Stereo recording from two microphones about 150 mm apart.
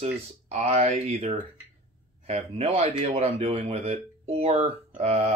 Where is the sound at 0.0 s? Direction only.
45° right (ahead or behind).